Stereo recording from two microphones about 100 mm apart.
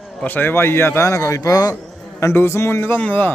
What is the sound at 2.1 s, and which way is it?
A man's voice, 25° left (ahead or behind).